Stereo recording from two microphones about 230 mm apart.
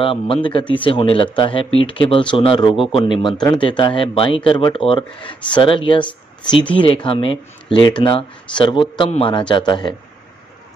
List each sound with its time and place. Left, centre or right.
0.0 s speech: left